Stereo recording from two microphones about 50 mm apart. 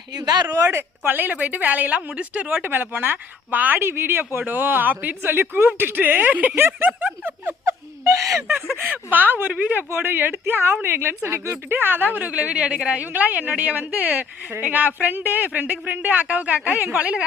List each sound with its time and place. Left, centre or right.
0.5 s speech: right
0.8 s a woman's voice: right
2.6 s a woman's voice: right
3.8 s a woman's voice: right
6.6 s a woman's voice: right
7.7 s wail: right
8.8 s a woman's voice: right
9.5 s speech: right
9.9 s a woman's voice: right
11.5 s a woman's voice: right
16.7 s a woman's voice: right
17.0 s speech: right